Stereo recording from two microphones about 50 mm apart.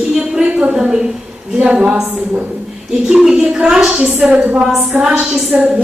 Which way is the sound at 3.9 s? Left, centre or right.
Right.